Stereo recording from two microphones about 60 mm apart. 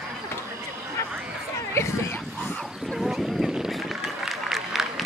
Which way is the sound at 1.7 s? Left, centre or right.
Left.